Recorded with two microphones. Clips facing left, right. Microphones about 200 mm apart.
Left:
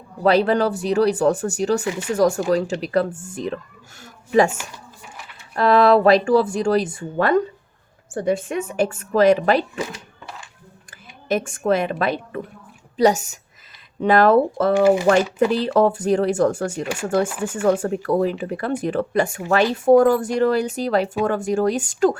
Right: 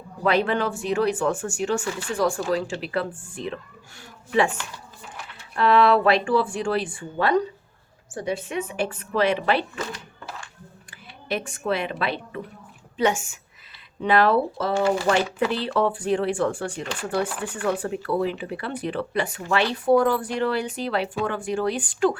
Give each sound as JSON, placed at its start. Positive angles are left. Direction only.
{"t": 0.2, "sound": "speech", "side_deg": 35}
{"t": 1.8, "sound": "speech", "side_deg": 20}
{"t": 2.0, "sound": "speech", "side_deg": 40}
{"t": 5.5, "sound": "speech", "side_deg": 40}
{"t": 11.3, "sound": "speech", "side_deg": 45}